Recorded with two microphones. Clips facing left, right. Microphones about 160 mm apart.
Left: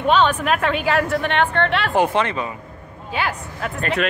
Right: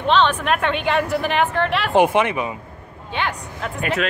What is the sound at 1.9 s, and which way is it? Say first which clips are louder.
Speech: right 3 dB; 15° right (ahead or behind).